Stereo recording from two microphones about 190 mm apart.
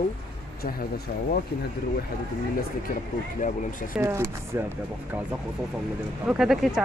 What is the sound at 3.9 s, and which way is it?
Speech, 15° right (ahead or behind).